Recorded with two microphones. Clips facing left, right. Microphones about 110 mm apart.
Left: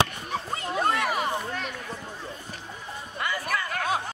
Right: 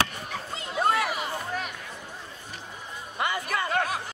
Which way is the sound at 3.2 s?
25° right (ahead or behind).